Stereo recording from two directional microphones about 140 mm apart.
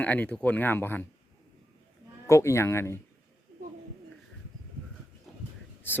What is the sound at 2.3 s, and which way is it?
Speech, 20° left (ahead or behind).